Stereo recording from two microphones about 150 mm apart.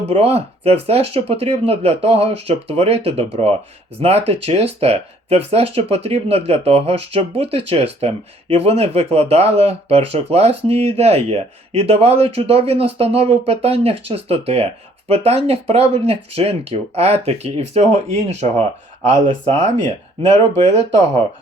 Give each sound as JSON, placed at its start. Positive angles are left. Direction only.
{"t": 0.1, "sound": "speech", "side_deg": -40}
{"t": 19.1, "sound": "speech", "side_deg": -55}